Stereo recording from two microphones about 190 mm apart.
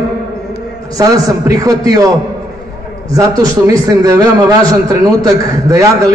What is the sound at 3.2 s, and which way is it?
A man's voice, 15° right (ahead or behind).